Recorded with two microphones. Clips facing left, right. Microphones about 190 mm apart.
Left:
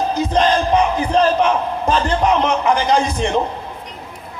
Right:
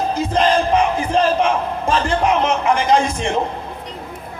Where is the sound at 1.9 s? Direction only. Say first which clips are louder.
Left 1 dB; 35° left (ahead or behind).